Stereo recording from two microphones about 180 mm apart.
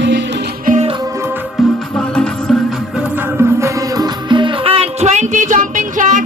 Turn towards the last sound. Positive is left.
turn(degrees=-45)  # may be behind; listen again after turning